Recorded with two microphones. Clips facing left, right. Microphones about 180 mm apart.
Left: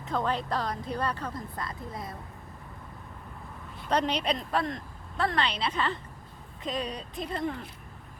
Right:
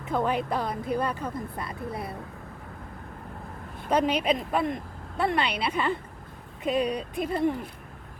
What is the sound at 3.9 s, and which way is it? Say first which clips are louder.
Speech: right 4 dB; 10° right (ahead or behind).